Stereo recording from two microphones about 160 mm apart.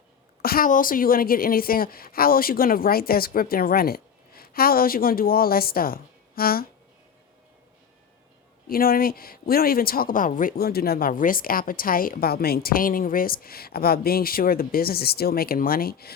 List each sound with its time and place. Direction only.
0.4 s speech: 65° left (ahead or behind)
8.7 s speech: 65° left (ahead or behind)